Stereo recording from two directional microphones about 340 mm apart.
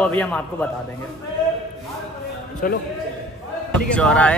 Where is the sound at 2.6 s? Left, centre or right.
Left.